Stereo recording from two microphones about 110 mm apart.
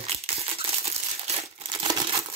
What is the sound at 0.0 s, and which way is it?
Crumpling, 65° right (ahead or behind).